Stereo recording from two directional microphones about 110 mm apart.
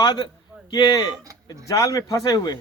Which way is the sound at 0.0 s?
40° left (ahead or behind).